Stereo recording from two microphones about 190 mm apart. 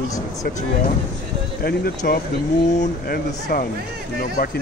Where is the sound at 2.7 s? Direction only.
40° left (ahead or behind).